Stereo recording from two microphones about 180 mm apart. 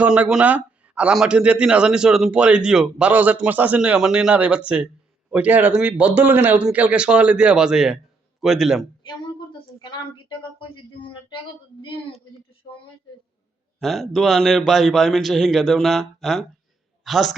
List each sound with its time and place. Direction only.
0.0 s speech: 5° right (ahead or behind)
9.0 s speech: 25° left (ahead or behind)
13.7 s a man's voice: centre (ahead or behind)